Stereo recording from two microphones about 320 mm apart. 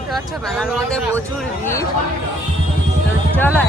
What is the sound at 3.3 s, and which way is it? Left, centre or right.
Speech, centre.